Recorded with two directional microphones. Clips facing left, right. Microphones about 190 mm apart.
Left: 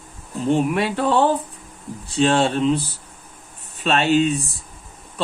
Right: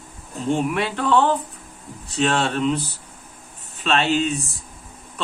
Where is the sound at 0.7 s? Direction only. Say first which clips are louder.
Left 1 dB; 40° left (ahead or behind).